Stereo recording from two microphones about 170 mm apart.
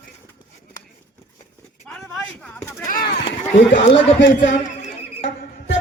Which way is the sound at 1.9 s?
5° left (ahead or behind).